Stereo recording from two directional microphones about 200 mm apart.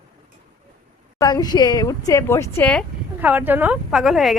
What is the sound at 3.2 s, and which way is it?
A woman's voice, 10° right (ahead or behind).